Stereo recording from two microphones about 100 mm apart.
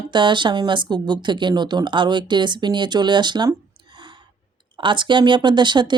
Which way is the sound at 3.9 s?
55° right (ahead or behind).